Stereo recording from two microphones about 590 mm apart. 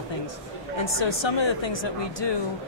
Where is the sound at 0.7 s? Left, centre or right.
Left.